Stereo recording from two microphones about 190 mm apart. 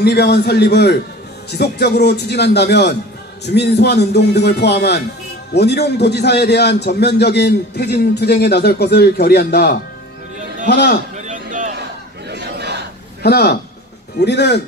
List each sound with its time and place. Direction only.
0.0 s a man's voice: 60° left (ahead or behind)
11.1 s a sound: 40° right (ahead or behind)
12.3 s battle cry: 65° right (ahead or behind)
13.2 s a man's voice: 55° left (ahead or behind)